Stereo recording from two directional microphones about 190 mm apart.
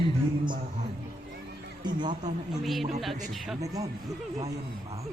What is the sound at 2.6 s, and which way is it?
Speech, centre (ahead or behind).